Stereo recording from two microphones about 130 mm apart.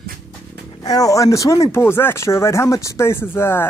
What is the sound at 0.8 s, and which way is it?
Speech, 30° left (ahead or behind).